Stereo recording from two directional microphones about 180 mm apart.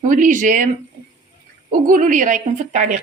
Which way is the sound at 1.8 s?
45° right (ahead or behind).